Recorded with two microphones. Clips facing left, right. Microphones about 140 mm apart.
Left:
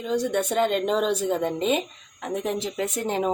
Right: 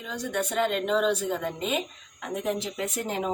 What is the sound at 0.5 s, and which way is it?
A woman's voice, 35° left (ahead or behind).